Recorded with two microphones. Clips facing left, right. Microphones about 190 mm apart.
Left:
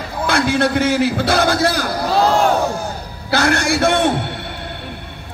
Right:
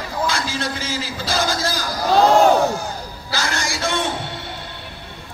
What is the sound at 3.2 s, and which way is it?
Speech, 60° left (ahead or behind).